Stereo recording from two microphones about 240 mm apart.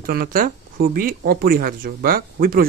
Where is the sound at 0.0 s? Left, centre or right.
Right.